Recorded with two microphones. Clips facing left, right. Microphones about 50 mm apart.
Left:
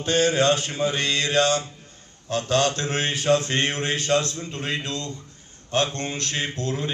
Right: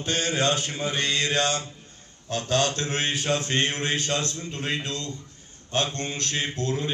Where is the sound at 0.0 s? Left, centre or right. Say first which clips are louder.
Left 5 dB; left.